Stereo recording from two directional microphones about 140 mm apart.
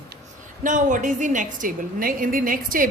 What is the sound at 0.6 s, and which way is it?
A woman's voice, 65° right (ahead or behind).